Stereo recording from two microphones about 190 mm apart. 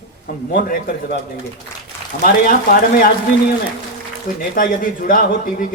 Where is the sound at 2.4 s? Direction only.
50° left (ahead or behind).